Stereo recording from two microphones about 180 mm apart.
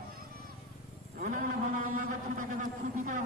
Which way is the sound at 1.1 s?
45° right (ahead or behind).